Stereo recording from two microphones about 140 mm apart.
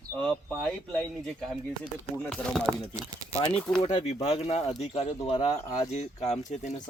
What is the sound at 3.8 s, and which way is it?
Speech, 45° left (ahead or behind).